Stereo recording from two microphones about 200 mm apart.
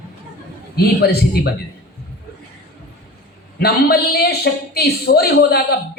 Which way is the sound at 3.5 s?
50° left (ahead or behind).